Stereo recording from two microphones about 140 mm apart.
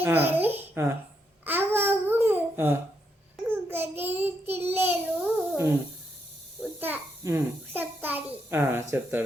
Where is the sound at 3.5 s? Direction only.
15° right (ahead or behind).